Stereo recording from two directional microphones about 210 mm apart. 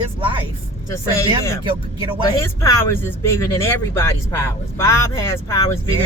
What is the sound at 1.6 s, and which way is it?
Speech, 25° right (ahead or behind).